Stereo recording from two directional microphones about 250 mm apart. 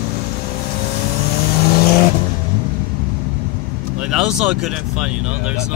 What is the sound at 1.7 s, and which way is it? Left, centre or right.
Vehicle, left.